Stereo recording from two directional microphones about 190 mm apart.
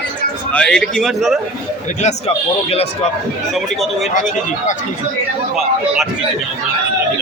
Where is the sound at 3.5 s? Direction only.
Centre (ahead or behind).